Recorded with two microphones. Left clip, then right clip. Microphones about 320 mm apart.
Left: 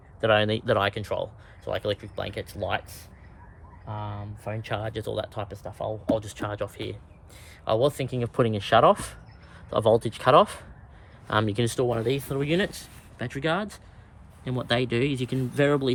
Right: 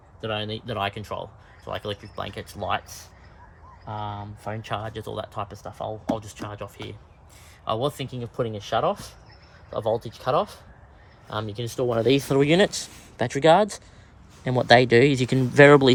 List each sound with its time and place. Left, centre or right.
0.2 s speech: centre
4.4 s speech: centre
8.2 s speech: left
11.4 s speech: centre
11.7 s speech: centre
11.9 s speech: right